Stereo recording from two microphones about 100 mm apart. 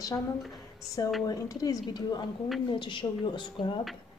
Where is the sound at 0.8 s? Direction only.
35° left (ahead or behind).